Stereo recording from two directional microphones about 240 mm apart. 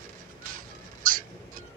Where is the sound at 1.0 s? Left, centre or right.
Right.